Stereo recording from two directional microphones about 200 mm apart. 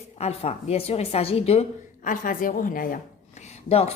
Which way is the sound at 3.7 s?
30° left (ahead or behind).